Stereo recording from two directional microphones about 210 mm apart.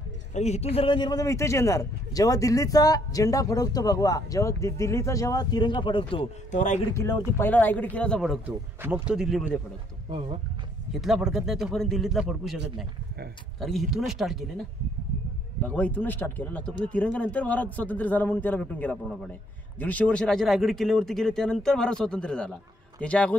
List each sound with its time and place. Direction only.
0.3 s speech: 30° left (ahead or behind)
6.9 s speech: 15° left (ahead or behind); by 9.6 s 5° right (ahead or behind)
10.9 s speech: centre (ahead or behind)
13.6 s speech: centre (ahead or behind)
15.6 s a man's voice: 5° left (ahead or behind)